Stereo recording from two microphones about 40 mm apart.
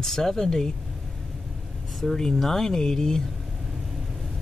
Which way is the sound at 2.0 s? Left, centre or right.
Centre.